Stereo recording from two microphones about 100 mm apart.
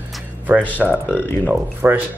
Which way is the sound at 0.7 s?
15° right (ahead or behind).